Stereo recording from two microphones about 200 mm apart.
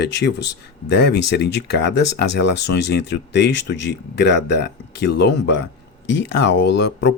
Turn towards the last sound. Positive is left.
turn(degrees=60)  # may be behind; listen again after turning